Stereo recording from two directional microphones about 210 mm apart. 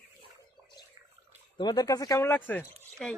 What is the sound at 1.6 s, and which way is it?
Speech, 20° left (ahead or behind).